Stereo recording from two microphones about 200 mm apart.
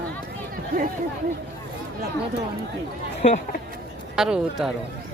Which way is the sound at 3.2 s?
35° left (ahead or behind).